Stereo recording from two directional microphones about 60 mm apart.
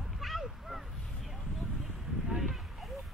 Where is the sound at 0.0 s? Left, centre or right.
Centre.